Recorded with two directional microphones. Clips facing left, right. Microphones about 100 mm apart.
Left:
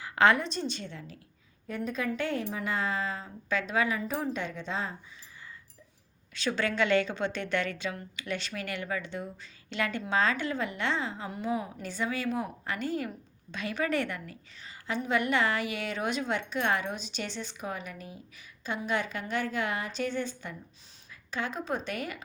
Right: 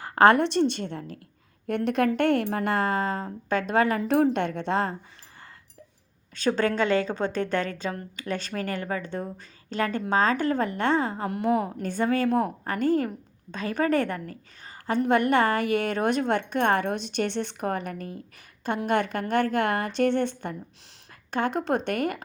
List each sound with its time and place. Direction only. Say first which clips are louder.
0.0 s speech: right 6 dB; 50° right (ahead or behind)
1.6 s speech: right 9 dB; 70° right (ahead or behind); by 4.0 s 55° right (ahead or behind)
4.0 s speech: right 10 dB; 70° right (ahead or behind)
6.3 s a woman's voice: right 6 dB; 45° right (ahead or behind)